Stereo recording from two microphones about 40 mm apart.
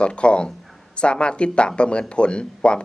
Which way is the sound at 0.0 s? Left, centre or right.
Left.